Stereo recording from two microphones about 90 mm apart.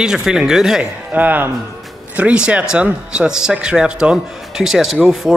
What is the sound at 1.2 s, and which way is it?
Speech, 20° right (ahead or behind).